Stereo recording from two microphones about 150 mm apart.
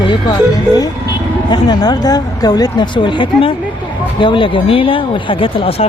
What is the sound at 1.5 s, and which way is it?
Speech, 30° left (ahead or behind).